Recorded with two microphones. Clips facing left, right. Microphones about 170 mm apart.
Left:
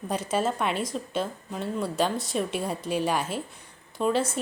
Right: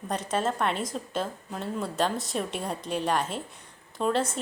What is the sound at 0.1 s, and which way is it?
A woman's voice, 5° left (ahead or behind).